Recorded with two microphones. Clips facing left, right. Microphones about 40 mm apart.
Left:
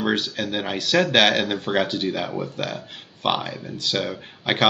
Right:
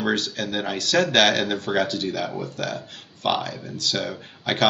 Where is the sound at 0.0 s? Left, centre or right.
Centre.